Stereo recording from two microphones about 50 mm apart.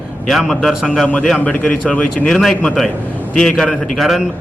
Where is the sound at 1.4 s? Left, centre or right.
Left.